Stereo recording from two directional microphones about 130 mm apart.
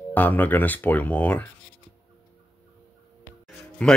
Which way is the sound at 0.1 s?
15° left (ahead or behind).